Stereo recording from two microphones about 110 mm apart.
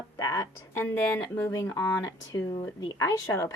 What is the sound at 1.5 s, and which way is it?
A woman's voice, 25° left (ahead or behind).